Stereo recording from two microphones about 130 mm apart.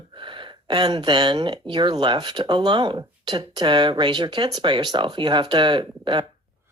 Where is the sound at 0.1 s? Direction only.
40° right (ahead or behind).